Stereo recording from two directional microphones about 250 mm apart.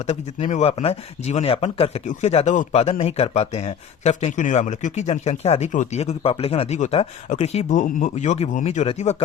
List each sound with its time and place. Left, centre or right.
0.1 s speech: left